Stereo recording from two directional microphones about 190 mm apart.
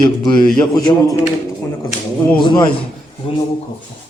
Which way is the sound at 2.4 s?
25° left (ahead or behind).